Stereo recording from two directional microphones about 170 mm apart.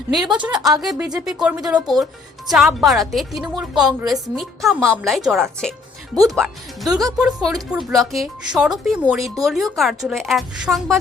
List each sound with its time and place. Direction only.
0.1 s speech: centre (ahead or behind)